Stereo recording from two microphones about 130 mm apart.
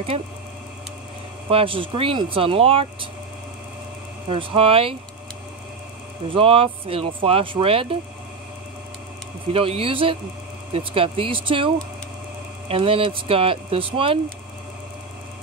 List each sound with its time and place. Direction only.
1.5 s speech: 45° right (ahead or behind)
4.3 s speech: 45° right (ahead or behind)
6.2 s speech: 45° right (ahead or behind)
9.5 s speech: 45° right (ahead or behind)